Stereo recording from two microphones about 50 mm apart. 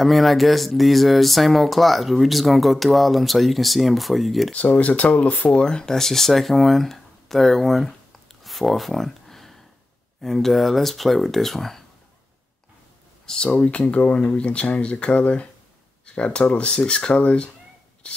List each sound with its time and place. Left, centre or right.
0.0 s speech: centre
4.7 s speech: left
5.6 s speech: centre
8.5 s a sound: centre
10.2 s speech: centre
13.2 s speech: centre
13.5 s speech: left
18.0 s a sound: left